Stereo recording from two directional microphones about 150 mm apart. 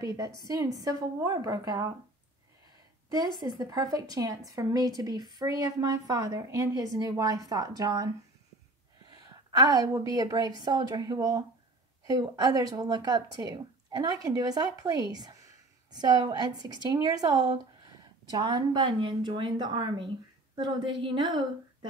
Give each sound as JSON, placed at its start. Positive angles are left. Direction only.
{"t": 0.0, "sound": "a woman's voice", "side_deg": -20}
{"t": 3.3, "sound": "a woman's voice", "side_deg": -25}